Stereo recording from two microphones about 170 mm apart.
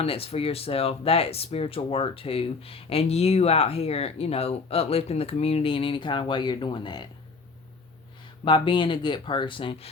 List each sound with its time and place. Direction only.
0.0 s speech: 35° left (ahead or behind)
8.4 s speech: 30° left (ahead or behind)